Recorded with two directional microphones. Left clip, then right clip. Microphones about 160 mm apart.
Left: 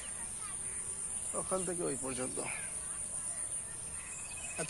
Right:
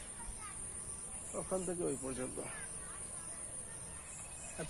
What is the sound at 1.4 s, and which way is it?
Speech, 25° left (ahead or behind).